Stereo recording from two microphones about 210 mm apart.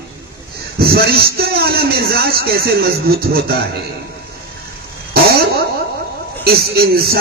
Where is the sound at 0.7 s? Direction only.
50° right (ahead or behind).